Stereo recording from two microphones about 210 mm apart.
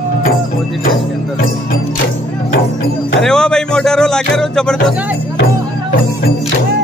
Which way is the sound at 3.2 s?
5° left (ahead or behind).